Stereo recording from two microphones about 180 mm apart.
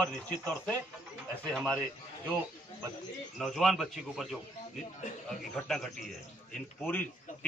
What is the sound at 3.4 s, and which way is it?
A man's voice, centre (ahead or behind).